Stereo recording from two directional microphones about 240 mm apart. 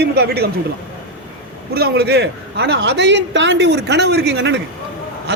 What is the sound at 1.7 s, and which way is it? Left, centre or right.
A man's voice, right.